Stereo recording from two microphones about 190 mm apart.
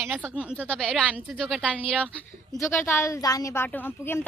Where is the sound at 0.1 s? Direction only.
5° right (ahead or behind).